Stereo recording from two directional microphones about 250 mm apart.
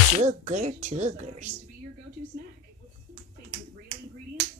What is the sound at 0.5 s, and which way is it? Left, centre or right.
Speech, right.